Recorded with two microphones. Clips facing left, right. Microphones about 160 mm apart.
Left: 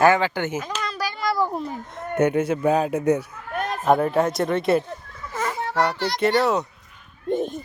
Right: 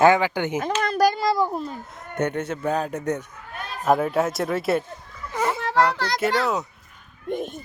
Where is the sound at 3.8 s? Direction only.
Centre (ahead or behind).